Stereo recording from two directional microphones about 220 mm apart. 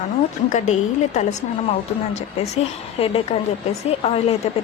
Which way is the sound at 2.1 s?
30° left (ahead or behind).